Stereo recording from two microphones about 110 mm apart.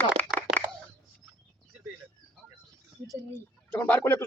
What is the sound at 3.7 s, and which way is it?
Speech, 15° left (ahead or behind).